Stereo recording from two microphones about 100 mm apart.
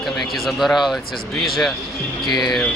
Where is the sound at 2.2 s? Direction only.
45° left (ahead or behind).